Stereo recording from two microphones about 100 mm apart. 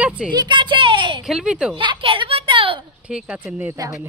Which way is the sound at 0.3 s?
50° right (ahead or behind).